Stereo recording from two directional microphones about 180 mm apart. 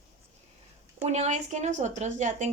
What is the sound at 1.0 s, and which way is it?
Speech, 40° right (ahead or behind).